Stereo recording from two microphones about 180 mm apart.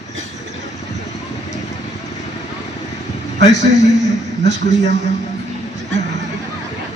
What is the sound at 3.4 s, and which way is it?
A man's voice, 75° right (ahead or behind).